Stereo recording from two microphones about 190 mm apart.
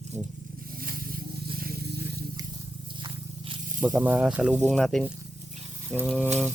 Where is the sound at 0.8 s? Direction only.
50° right (ahead or behind).